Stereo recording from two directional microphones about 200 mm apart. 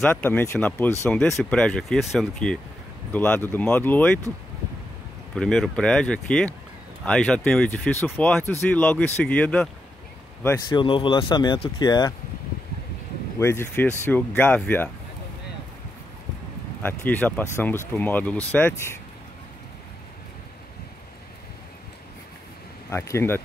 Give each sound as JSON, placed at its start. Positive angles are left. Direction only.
{"t": 0.0, "sound": "speech", "side_deg": 5}
{"t": 5.3, "sound": "speech", "side_deg": 5}
{"t": 10.7, "sound": "speech", "side_deg": 25}
{"t": 13.4, "sound": "speech", "side_deg": 10}
{"t": 16.8, "sound": "speech", "side_deg": 10}
{"t": 22.8, "sound": "speech", "side_deg": 15}